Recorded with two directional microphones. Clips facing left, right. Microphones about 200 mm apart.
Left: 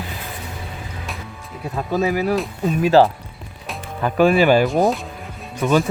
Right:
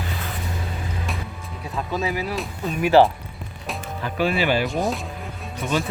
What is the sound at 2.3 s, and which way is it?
Speech, centre (ahead or behind).